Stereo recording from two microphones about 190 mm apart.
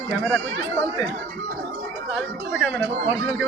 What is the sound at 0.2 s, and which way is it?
Speech, 10° left (ahead or behind).